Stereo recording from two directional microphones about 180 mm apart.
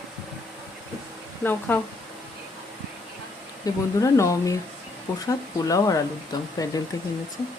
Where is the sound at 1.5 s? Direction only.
10° left (ahead or behind).